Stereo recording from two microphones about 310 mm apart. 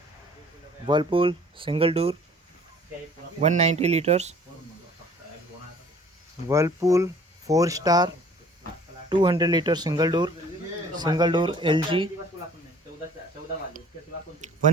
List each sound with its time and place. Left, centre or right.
0.9 s speech: centre
3.4 s speech: right
6.5 s speech: centre
14.4 s a sound: right